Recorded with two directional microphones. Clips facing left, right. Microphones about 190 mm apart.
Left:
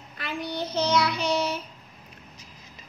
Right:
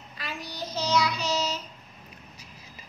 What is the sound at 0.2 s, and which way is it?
Child singing, 55° left (ahead or behind).